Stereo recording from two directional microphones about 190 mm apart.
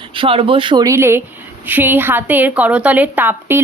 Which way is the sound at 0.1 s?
30° right (ahead or behind).